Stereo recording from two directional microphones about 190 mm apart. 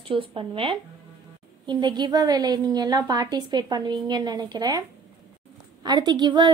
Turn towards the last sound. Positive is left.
turn(degrees=-25)  # may be behind; listen again after turning